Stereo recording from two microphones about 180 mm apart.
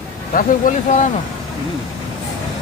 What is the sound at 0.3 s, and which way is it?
Speech, 45° left (ahead or behind).